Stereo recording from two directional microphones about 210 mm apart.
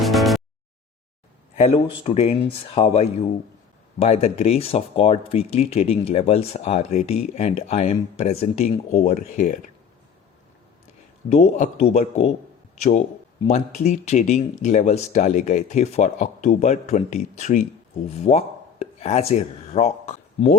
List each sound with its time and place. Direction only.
0.0 s a sound: centre (ahead or behind)
1.5 s speech: 30° left (ahead or behind)
11.3 s speech: 30° left (ahead or behind)